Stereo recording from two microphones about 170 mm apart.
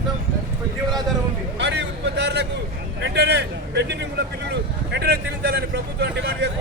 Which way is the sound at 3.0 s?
85° right.